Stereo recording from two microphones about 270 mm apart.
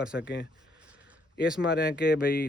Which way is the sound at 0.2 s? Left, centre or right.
Left.